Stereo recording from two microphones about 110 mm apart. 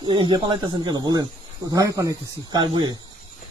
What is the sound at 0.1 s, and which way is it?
Speech, 45° right (ahead or behind).